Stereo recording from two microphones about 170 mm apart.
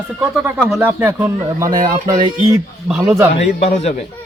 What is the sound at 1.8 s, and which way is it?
Speech, 25° right (ahead or behind).